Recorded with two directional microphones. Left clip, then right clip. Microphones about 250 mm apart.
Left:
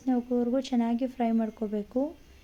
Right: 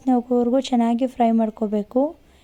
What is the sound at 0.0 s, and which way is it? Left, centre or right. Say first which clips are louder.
A woman's voice: right 9 dB; right.